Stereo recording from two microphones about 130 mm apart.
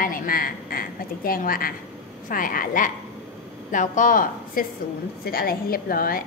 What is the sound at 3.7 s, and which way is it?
Speech, 80° left.